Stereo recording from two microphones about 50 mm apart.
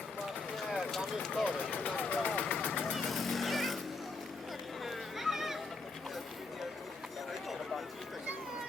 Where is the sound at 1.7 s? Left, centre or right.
Centre.